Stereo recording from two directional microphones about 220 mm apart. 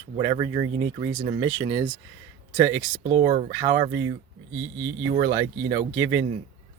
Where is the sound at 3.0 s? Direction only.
20° right (ahead or behind).